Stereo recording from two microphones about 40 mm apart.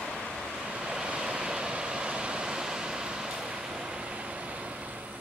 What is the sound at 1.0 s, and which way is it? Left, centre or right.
Vehicle, right.